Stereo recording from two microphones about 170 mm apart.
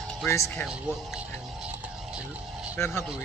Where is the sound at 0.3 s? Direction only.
15° left (ahead or behind).